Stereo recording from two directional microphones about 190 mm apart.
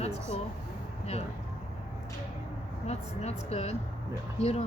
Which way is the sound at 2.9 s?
35° left (ahead or behind).